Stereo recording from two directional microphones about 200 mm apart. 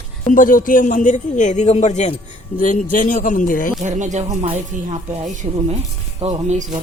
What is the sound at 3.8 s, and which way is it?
Speech, 35° right (ahead or behind).